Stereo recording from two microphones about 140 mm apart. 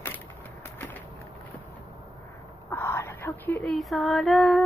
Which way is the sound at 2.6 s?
20° left (ahead or behind).